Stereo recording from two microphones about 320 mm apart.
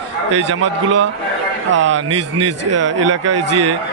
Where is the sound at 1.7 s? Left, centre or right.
Right.